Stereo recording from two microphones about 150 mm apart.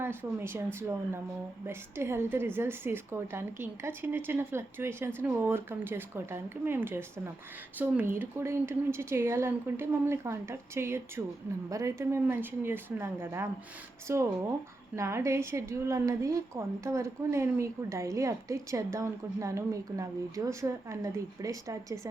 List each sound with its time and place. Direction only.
0.0 s a woman's voice: 15° right (ahead or behind)